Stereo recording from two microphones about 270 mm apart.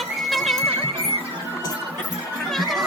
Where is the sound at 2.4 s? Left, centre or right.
Centre.